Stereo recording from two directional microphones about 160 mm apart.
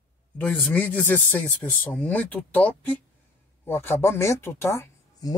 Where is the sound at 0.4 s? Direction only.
10° left (ahead or behind).